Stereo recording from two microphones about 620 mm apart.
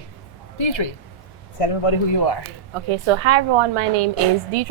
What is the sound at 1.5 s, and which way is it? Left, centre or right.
Speech, left.